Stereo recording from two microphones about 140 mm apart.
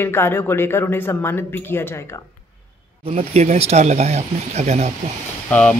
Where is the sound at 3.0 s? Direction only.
50° right (ahead or behind).